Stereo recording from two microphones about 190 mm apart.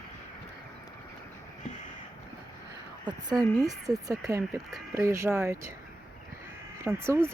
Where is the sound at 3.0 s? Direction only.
20° right (ahead or behind).